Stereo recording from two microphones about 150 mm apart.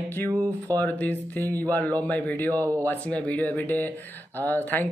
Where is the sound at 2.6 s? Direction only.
15° right (ahead or behind).